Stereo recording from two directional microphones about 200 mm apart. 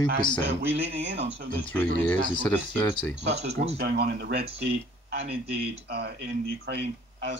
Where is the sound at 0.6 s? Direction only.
60° right (ahead or behind).